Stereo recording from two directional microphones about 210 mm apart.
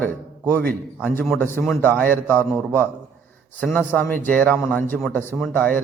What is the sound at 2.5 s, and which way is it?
Speech, 15° right (ahead or behind).